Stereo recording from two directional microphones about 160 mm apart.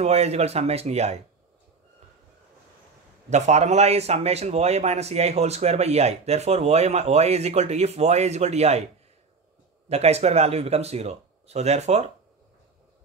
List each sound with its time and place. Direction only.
0.0 s speech: 40° right (ahead or behind)
3.3 s a man's voice: 45° right (ahead or behind)
9.8 s speech: 40° right (ahead or behind)